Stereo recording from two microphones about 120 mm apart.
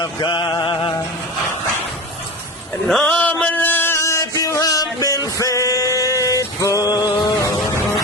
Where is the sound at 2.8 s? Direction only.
5° left (ahead or behind).